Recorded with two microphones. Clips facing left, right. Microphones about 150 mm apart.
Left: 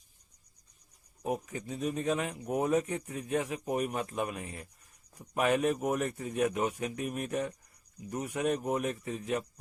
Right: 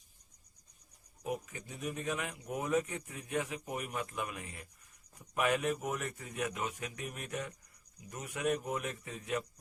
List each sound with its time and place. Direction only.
1.2 s a man's voice: 30° left (ahead or behind)
7.0 s a man's voice: 20° left (ahead or behind)
7.3 s speech: 30° left (ahead or behind)